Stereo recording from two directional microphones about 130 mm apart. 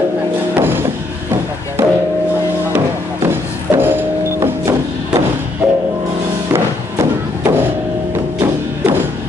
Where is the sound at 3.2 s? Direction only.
15° right (ahead or behind).